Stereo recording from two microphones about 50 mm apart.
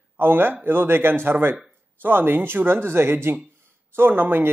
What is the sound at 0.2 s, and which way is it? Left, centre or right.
A man's voice, right.